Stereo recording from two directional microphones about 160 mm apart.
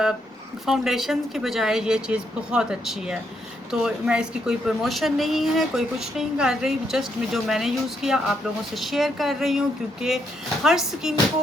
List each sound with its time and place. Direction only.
0.6 s a woman's voice: centre (ahead or behind)